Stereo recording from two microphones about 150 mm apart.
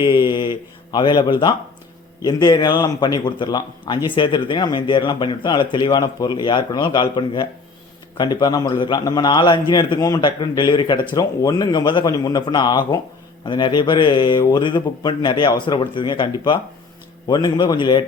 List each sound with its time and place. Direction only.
0.0 s a man's voice: 30° left (ahead or behind)